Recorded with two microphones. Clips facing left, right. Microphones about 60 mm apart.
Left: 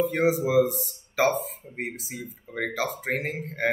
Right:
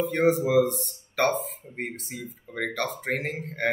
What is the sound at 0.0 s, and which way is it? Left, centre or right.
Speech, centre.